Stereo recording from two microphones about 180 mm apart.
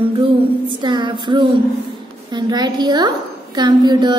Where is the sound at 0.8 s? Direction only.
25° right (ahead or behind).